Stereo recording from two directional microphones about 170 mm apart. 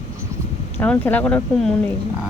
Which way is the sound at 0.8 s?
10° left (ahead or behind).